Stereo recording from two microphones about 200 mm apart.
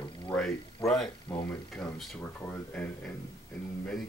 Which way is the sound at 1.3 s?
15° left (ahead or behind).